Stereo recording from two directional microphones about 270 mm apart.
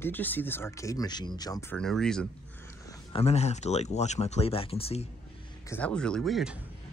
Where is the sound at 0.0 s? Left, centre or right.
Centre.